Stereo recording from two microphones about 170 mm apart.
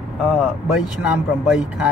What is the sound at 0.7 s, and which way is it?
Speech, 5° right (ahead or behind).